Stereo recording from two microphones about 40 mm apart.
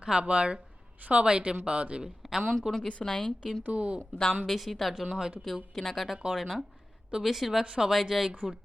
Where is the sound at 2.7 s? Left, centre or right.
Centre.